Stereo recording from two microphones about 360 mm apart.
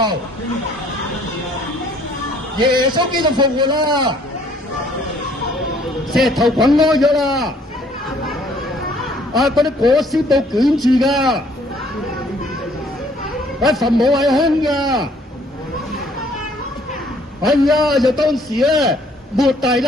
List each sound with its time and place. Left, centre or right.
2.6 s a man's voice: centre
6.1 s a man's voice: centre
9.0 s a man's voice: centre
13.6 s a man's voice: centre
17.4 s a man's voice: centre